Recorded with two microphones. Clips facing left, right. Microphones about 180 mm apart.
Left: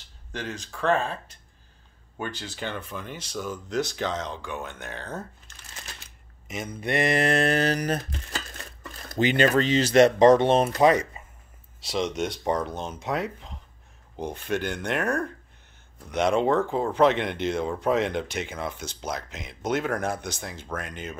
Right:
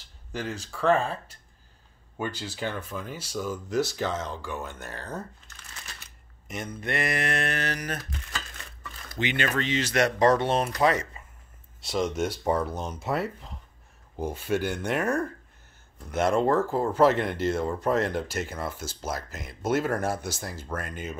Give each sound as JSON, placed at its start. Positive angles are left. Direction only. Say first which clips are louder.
{"t": 0.3, "sound": "speech", "louder": "right 1 dB", "side_deg": -10}
{"t": 6.4, "sound": "speech", "louder": "left 1 dB", "side_deg": 0}
{"t": 6.8, "sound": "a sound", "louder": "left 6 dB", "side_deg": 20}
{"t": 8.8, "sound": "speech", "louder": "left 6 dB", "side_deg": 40}
{"t": 11.8, "sound": "speech", "louder": "even", "side_deg": 0}